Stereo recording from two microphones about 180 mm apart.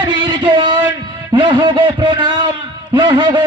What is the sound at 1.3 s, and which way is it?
A man's voice, 25° right (ahead or behind).